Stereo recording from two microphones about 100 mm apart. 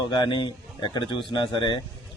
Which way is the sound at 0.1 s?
50° left (ahead or behind).